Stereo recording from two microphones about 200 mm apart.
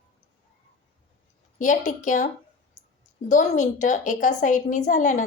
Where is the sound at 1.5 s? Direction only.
40° left (ahead or behind).